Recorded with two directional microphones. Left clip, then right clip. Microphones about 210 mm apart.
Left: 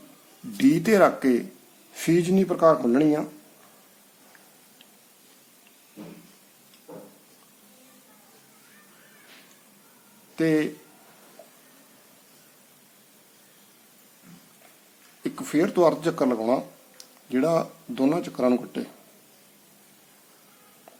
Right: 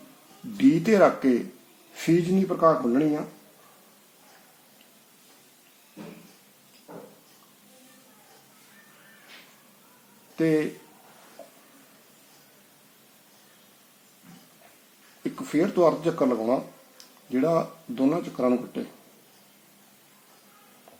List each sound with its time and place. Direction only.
0.5 s speech: centre (ahead or behind)
1.9 s a sound: centre (ahead or behind)
2.5 s speech: 10° left (ahead or behind)
10.3 s speech: centre (ahead or behind)
15.2 s speech: centre (ahead or behind)